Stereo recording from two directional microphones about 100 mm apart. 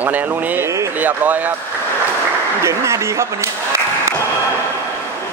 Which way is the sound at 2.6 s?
30° right (ahead or behind).